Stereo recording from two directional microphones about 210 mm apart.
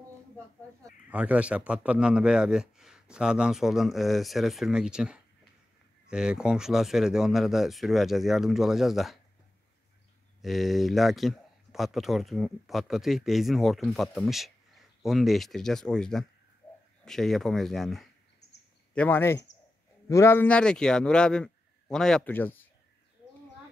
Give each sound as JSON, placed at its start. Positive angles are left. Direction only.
{"t": 1.1, "sound": "a man's voice", "side_deg": -5}
{"t": 10.4, "sound": "a man's voice", "side_deg": 0}
{"t": 18.4, "sound": "a sound", "side_deg": 50}
{"t": 18.9, "sound": "a man's voice", "side_deg": 10}